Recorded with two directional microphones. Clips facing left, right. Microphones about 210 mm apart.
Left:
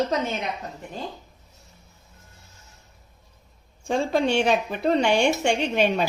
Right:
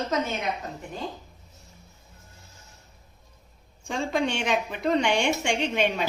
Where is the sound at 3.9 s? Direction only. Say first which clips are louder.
Left 4 dB; 35° left (ahead or behind).